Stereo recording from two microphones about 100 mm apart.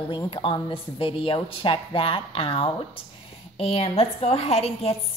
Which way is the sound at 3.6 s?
75° left (ahead or behind).